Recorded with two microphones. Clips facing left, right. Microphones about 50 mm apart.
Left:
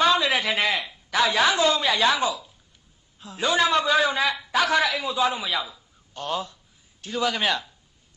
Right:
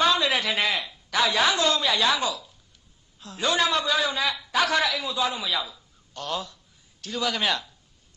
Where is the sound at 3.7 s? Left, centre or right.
Centre.